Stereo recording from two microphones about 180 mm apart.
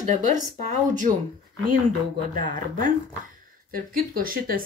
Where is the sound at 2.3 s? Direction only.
45° right (ahead or behind).